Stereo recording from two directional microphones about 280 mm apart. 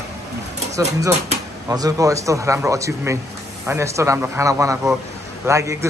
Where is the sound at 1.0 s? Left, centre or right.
Centre.